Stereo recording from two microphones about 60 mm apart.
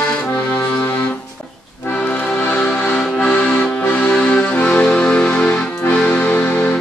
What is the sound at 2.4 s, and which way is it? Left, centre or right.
Music, left.